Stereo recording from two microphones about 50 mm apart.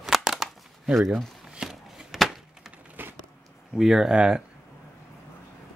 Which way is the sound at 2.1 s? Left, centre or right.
Centre.